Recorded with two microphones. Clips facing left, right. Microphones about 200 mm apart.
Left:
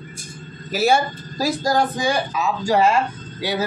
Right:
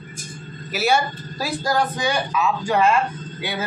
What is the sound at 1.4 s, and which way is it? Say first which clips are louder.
Speech: left 3 dB; 40° left (ahead or behind).